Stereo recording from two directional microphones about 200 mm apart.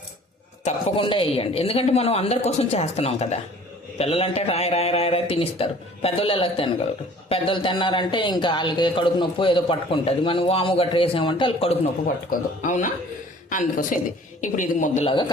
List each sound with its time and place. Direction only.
0.6 s speech: 25° left (ahead or behind)
12.6 s speech: 40° left (ahead or behind)
15.0 s speech: 25° left (ahead or behind)